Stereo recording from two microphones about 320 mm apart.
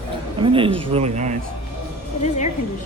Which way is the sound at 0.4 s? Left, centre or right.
Centre.